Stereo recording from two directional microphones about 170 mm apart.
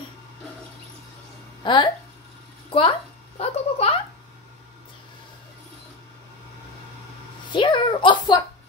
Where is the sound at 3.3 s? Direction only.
35° left (ahead or behind).